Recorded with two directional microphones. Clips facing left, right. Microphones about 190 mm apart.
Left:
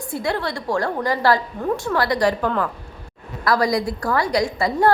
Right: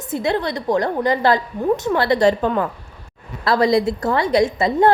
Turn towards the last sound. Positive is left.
turn(degrees=-20)  # may be behind; listen again after turning